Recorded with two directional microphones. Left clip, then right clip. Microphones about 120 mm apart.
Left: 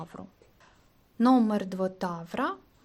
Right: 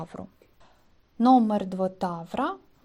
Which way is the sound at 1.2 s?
5° left (ahead or behind).